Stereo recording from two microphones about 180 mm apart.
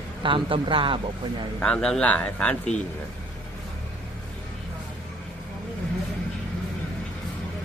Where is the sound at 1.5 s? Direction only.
5° left (ahead or behind).